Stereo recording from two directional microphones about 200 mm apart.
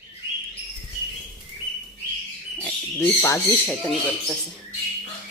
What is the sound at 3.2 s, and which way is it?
Speech, 15° left (ahead or behind).